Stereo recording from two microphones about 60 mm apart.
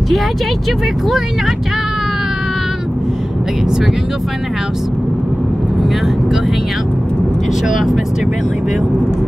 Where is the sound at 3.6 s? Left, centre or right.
Centre.